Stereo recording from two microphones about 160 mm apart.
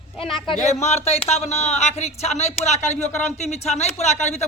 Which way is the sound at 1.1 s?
40° left (ahead or behind).